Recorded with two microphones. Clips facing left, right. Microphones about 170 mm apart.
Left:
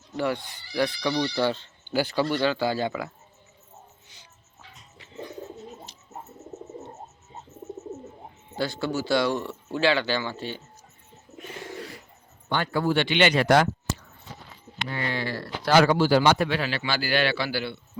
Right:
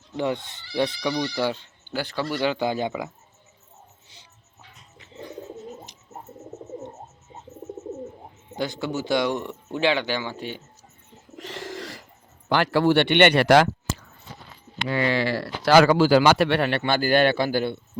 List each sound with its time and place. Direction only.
0.2 s speech: 20° right (ahead or behind)
1.0 s speech: 10° right (ahead or behind)
1.9 s speech: 5° left (ahead or behind)
2.3 s speech: 15° right (ahead or behind)
5.9 s bird: 15° right (ahead or behind)
8.5 s speech: 15° right (ahead or behind)
11.3 s bird: 90° right
12.5 s speech: 90° right; by 17.7 s 50° right (ahead or behind)